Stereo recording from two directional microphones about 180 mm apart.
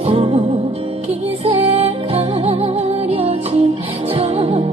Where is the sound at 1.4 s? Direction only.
35° right (ahead or behind).